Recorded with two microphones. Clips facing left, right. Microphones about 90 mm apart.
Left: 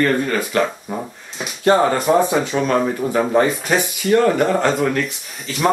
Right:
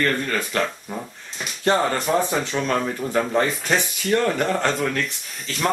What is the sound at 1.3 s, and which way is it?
Speech, 5° left (ahead or behind).